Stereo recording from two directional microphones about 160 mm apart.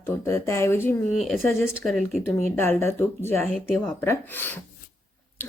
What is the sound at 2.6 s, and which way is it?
A woman's voice, 15° left (ahead or behind).